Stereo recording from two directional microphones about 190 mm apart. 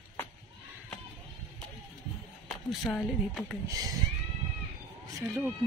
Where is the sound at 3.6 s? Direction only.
20° right (ahead or behind).